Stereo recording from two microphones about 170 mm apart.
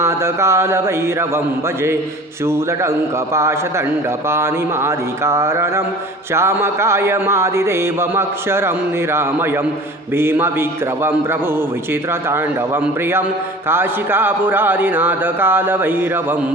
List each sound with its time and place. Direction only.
0.0 s speech: 15° right (ahead or behind)
3.3 s speech: 15° right (ahead or behind)
10.2 s speech: 15° right (ahead or behind)